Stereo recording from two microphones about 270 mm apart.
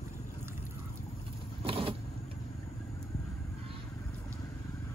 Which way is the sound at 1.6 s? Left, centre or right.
Centre.